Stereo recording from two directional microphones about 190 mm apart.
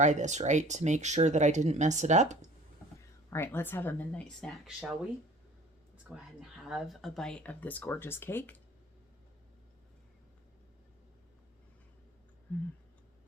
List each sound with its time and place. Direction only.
0.0 s speech: 40° right (ahead or behind)
3.2 s speech: 15° left (ahead or behind)
6.1 s speech: 5° right (ahead or behind); by 8.5 s 10° left (ahead or behind)
12.5 s speech: 10° left (ahead or behind)